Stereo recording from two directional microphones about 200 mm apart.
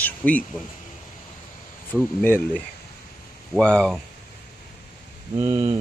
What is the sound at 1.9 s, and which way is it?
Speech, 10° left (ahead or behind).